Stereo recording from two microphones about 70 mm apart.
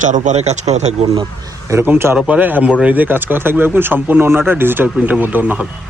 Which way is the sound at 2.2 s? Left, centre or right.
Right.